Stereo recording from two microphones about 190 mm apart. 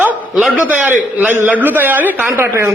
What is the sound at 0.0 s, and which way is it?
A man's voice, 5° right (ahead or behind).